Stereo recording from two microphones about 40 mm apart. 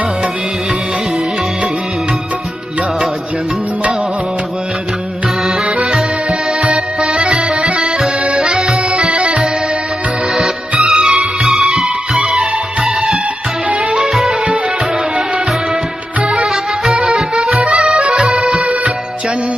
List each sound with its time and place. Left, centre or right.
5.6 s music: right
7.2 s music: right
8.5 s accordion: centre
8.9 s music: right
10.8 s music: right
11.2 s music: centre
14.0 s music: centre
16.2 s music: right
16.5 s music: centre
17.9 s accordion: right